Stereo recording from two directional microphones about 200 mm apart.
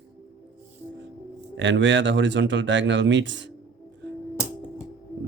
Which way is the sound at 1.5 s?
65° right (ahead or behind).